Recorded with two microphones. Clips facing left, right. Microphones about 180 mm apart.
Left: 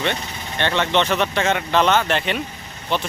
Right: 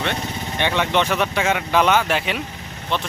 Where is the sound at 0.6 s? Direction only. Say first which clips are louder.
Left 1 dB; 10° right (ahead or behind).